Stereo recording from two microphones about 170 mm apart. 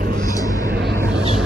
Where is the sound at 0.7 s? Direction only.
75° right (ahead or behind).